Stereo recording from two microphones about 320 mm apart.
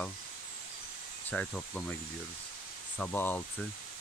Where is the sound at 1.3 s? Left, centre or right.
Centre.